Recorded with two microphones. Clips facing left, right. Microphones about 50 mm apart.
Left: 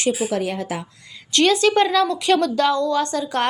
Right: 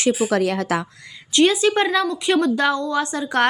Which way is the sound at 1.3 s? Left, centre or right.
Centre.